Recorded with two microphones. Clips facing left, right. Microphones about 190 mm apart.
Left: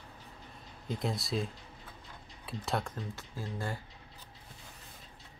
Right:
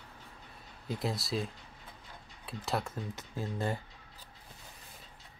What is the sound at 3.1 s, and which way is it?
Speech, 20° right (ahead or behind).